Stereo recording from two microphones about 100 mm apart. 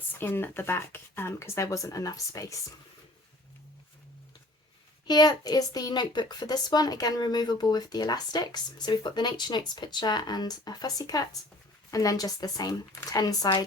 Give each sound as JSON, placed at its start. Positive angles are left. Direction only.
{"t": 0.2, "sound": "speech", "side_deg": 20}
{"t": 5.0, "sound": "a woman's voice", "side_deg": 40}